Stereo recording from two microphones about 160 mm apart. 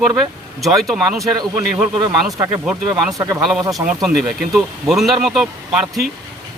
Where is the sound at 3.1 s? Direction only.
20° right (ahead or behind).